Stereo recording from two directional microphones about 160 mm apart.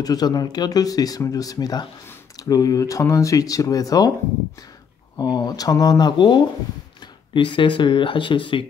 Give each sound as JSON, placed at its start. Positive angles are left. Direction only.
{"t": 0.0, "sound": "speech", "side_deg": 25}
{"t": 5.2, "sound": "speech", "side_deg": 25}